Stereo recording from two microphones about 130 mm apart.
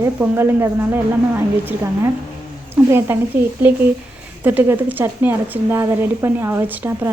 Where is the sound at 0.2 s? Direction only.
20° right (ahead or behind).